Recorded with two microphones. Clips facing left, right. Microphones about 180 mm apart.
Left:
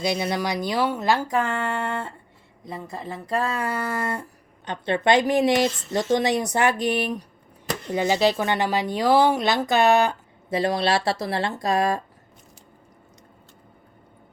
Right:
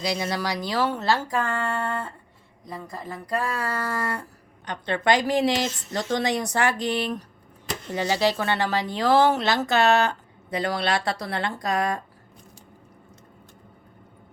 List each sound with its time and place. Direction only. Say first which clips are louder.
0.0 s a woman's voice: left 2 dB; 20° left (ahead or behind)